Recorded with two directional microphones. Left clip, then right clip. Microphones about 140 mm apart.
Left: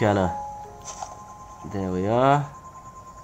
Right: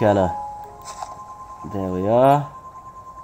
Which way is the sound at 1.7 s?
45° right (ahead or behind).